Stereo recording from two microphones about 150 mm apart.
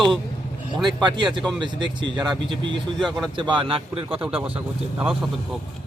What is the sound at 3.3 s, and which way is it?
Speech, 30° right (ahead or behind).